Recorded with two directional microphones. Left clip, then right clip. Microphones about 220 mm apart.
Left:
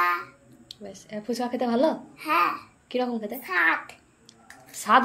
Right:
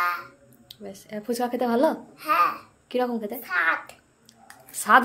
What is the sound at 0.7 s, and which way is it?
A child's voice, 15° right (ahead or behind).